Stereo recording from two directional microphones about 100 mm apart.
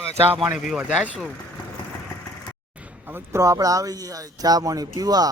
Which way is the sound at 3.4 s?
35° right (ahead or behind).